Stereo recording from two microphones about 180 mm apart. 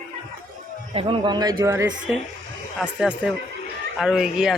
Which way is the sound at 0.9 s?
30° right (ahead or behind).